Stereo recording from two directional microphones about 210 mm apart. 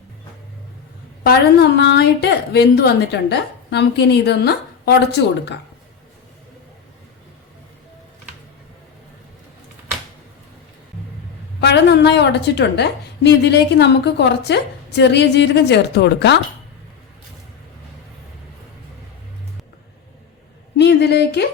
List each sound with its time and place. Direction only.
1.2 s a woman's voice: 50° left (ahead or behind)
11.6 s a woman's voice: 55° left (ahead or behind)
20.7 s speech: 55° left (ahead or behind)